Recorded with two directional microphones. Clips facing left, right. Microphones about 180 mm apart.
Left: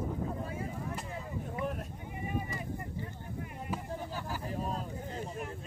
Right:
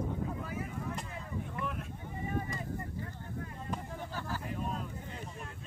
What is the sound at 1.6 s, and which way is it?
Boat, 40° left (ahead or behind).